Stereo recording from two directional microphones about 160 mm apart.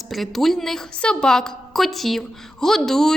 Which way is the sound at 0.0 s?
Centre (ahead or behind).